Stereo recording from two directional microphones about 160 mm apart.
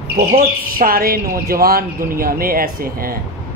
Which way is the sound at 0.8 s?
65° right (ahead or behind).